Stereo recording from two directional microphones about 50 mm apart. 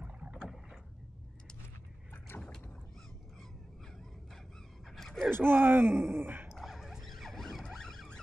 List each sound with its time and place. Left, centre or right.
0.0 s rowboat: right
4.8 s gasp: centre
5.3 s speech: right
6.5 s dog: centre
7.7 s vehicle: centre